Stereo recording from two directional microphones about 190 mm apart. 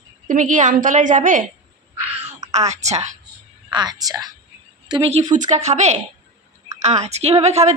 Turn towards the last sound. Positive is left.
turn(degrees=-35)  # may be behind; listen again after turning